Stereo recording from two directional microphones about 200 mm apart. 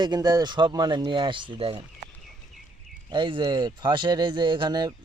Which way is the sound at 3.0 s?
25° right (ahead or behind).